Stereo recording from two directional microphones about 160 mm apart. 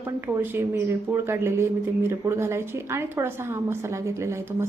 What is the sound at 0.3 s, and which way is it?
A woman's voice, 15° right (ahead or behind).